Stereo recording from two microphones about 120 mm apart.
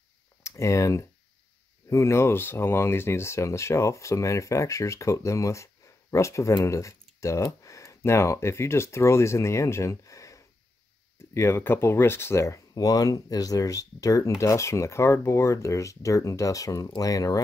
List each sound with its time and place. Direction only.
0.4 s speech: 25° left (ahead or behind)